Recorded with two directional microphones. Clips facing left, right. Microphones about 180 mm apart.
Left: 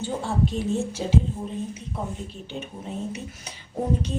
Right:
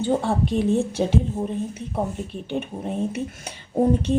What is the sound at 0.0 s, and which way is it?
A woman's voice, 60° right (ahead or behind).